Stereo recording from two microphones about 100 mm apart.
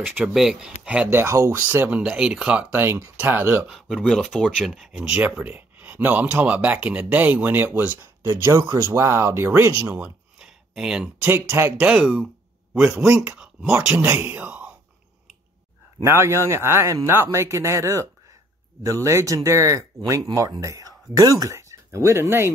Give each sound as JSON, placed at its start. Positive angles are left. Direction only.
{"t": 0.0, "sound": "speech", "side_deg": -5}
{"t": 1.1, "sound": "a man's voice", "side_deg": -25}
{"t": 1.7, "sound": "speech", "side_deg": -15}
{"t": 2.7, "sound": "a man's voice", "side_deg": -25}
{"t": 3.6, "sound": "a man's voice", "side_deg": 0}
{"t": 9.9, "sound": "a sound", "side_deg": -10}
{"t": 10.7, "sound": "speech", "side_deg": -5}
{"t": 11.2, "sound": "a man's voice", "side_deg": -25}
{"t": 13.9, "sound": "speech", "side_deg": -20}
{"t": 16.0, "sound": "a man's voice", "side_deg": -25}